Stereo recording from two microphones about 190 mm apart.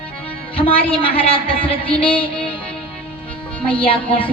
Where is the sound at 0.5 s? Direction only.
30° left (ahead or behind).